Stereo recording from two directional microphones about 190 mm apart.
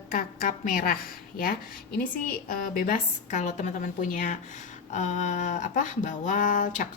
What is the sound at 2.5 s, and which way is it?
A woman's voice, 50° left (ahead or behind).